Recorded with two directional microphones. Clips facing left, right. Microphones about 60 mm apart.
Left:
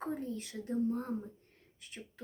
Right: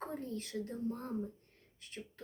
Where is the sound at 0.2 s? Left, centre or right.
Left.